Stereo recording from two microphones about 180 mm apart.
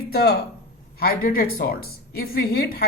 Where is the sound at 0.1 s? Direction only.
60° left (ahead or behind).